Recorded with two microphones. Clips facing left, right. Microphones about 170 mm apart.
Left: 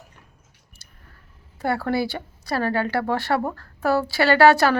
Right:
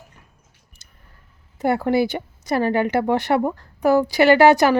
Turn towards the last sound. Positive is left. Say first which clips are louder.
# right 3 dB
turn(degrees=-20)  # may be behind; listen again after turning